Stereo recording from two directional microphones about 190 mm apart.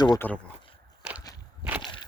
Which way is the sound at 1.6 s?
5° right (ahead or behind).